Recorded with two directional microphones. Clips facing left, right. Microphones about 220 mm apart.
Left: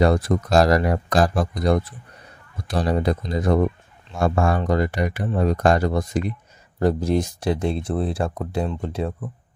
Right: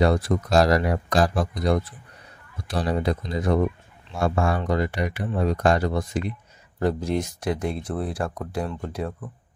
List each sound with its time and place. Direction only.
0.0 s speech: 45° left (ahead or behind); by 9.1 s 25° left (ahead or behind)